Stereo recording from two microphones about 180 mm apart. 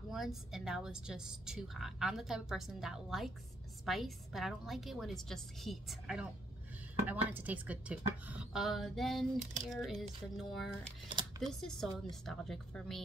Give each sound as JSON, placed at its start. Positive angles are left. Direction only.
{"t": 0.1, "sound": "a woman's voice", "side_deg": 0}
{"t": 11.1, "sound": "speech", "side_deg": -25}
{"t": 11.4, "sound": "a woman's voice", "side_deg": 0}